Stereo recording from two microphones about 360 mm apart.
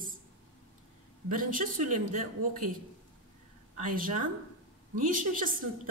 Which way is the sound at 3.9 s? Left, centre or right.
Right.